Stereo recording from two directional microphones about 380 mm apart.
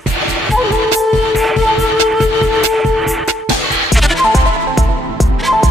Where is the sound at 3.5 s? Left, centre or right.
Right.